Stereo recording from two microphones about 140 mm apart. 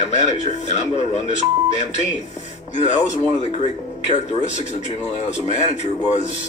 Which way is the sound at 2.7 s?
55° left (ahead or behind).